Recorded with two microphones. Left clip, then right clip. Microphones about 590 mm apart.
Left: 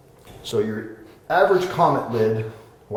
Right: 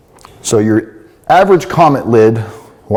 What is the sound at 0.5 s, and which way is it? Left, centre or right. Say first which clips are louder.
Speech: right 11 dB; right.